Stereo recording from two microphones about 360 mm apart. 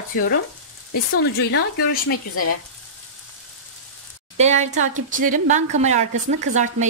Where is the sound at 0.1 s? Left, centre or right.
Left.